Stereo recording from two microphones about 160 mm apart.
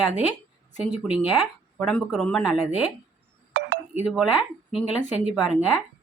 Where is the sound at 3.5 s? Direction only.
90° right.